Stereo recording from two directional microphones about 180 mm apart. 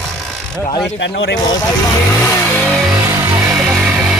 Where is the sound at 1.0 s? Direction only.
90° left.